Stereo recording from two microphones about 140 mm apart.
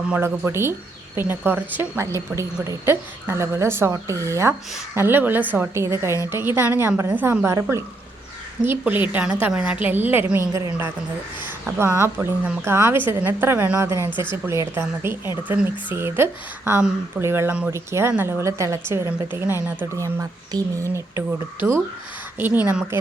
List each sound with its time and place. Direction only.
0.1 s speech: 15° right (ahead or behind)